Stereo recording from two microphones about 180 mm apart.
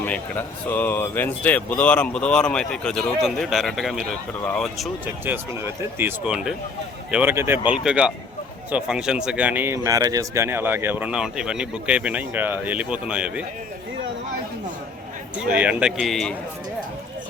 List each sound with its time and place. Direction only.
0.0 s speech: 10° left (ahead or behind)
5.2 s a man's voice: 10° right (ahead or behind)
15.4 s speech: 5° right (ahead or behind)